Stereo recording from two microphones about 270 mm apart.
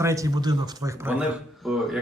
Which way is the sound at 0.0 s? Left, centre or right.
Centre.